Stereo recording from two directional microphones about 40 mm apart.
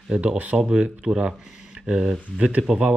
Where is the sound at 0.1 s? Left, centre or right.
Right.